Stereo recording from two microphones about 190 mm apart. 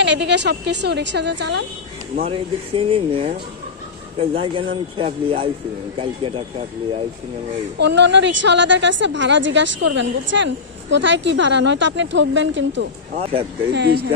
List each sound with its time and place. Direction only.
0.0 s a woman's voice: 65° right (ahead or behind)
2.2 s speech: 30° right (ahead or behind)
7.8 s a woman's voice: 65° right (ahead or behind)
13.2 s speech: 30° right (ahead or behind)
13.7 s a woman's voice: 60° right (ahead or behind)